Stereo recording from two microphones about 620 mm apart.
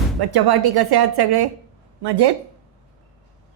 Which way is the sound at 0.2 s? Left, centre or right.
Right.